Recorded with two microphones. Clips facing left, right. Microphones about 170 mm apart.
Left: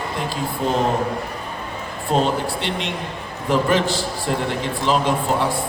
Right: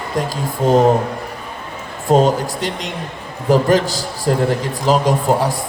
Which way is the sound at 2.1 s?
40° right (ahead or behind).